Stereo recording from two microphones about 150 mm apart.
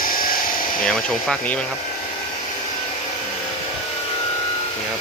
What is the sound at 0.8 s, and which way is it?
Speech, 5° left (ahead or behind).